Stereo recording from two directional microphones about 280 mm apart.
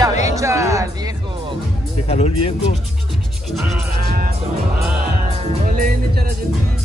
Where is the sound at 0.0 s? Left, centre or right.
Centre.